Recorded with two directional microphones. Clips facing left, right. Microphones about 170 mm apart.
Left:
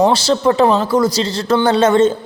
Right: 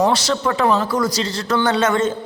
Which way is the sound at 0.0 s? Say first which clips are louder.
Left 5 dB; 30° left (ahead or behind).